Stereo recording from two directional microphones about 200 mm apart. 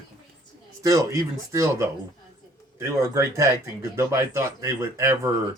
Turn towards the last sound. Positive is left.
turn(degrees=-15)  # may be behind; listen again after turning